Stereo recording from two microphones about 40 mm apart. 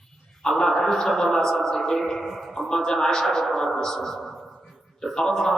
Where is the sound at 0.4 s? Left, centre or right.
Centre.